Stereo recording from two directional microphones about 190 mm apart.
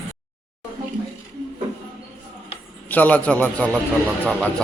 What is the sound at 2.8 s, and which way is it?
A man's voice, 10° left (ahead or behind).